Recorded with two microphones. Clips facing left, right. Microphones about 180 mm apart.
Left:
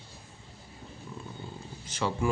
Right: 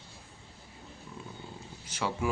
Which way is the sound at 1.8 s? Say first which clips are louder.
Left 2 dB; 10° right (ahead or behind).